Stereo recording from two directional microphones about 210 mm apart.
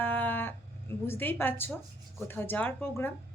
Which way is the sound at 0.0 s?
10° left (ahead or behind).